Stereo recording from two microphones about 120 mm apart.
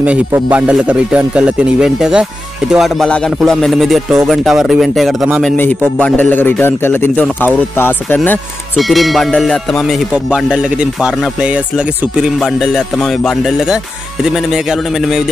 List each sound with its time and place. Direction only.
0.0 s speech: 10° right (ahead or behind)
2.7 s music: centre (ahead or behind)
5.9 s speech: 10° left (ahead or behind)
8.7 s music: centre (ahead or behind)
12.4 s music: 5° left (ahead or behind)